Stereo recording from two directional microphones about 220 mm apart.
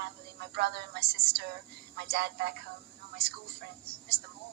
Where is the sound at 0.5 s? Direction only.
50° right (ahead or behind).